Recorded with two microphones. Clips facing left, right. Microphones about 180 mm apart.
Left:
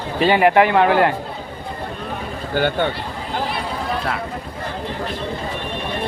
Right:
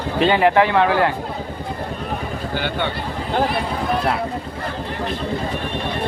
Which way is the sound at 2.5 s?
45° left (ahead or behind).